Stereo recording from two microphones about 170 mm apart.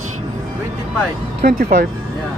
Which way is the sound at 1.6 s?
60° right (ahead or behind).